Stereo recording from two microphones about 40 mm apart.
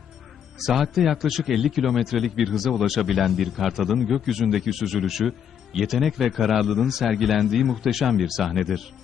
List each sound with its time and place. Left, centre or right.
0.6 s a man's voice: centre